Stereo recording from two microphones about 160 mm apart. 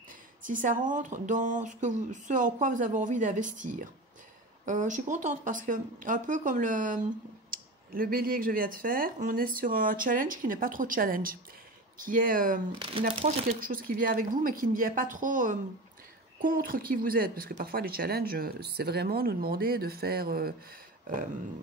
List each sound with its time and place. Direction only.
0.4 s speech: 55° right (ahead or behind)
7.5 s speech: 65° right (ahead or behind)
12.7 s speech: 35° right (ahead or behind)
13.6 s speech: 60° right (ahead or behind)